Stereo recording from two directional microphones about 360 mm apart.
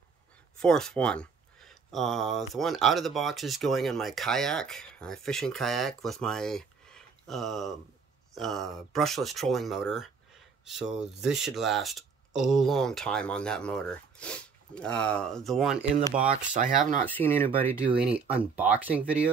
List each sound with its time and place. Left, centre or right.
0.6 s speech: centre
16.3 s speech: right
17.0 s speech: centre